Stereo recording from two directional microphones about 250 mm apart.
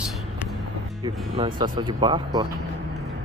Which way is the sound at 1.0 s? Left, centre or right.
Centre.